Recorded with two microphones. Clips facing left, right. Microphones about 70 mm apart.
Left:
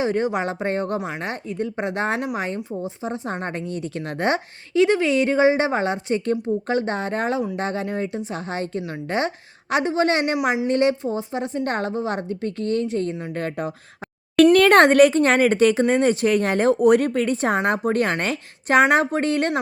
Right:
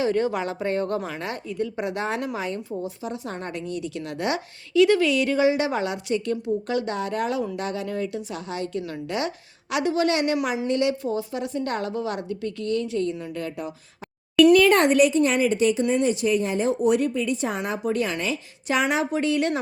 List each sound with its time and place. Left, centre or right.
0.0 s a woman's voice: left
2.6 s a woman's voice: left
11.0 s a woman's voice: left
14.5 s speech: left